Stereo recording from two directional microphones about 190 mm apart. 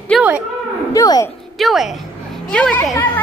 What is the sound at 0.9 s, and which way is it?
Speech, 20° left (ahead or behind).